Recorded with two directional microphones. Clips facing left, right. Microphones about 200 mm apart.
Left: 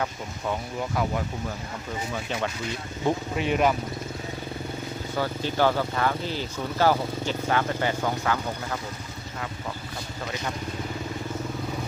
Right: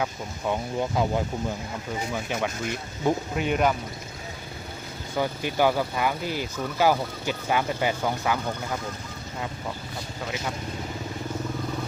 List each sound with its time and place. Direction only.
0.8 s speech: 25° right (ahead or behind)
2.1 s speech: 10° right (ahead or behind)
5.1 s speech: 15° right (ahead or behind)